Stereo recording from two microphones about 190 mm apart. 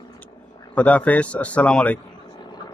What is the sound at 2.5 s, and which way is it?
Vehicle, 20° left (ahead or behind).